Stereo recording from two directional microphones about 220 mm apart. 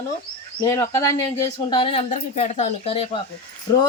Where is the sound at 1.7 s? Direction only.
25° left (ahead or behind).